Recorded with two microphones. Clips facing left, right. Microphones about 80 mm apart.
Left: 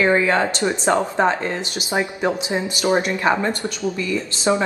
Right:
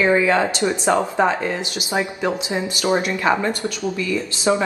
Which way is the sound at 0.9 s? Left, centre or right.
Centre.